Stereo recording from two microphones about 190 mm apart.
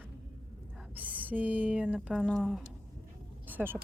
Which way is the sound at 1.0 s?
10° right (ahead or behind).